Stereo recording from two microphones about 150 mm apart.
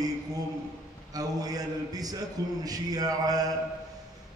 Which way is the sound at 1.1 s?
25° right (ahead or behind).